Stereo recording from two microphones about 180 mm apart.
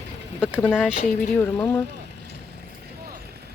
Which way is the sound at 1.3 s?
10° left (ahead or behind).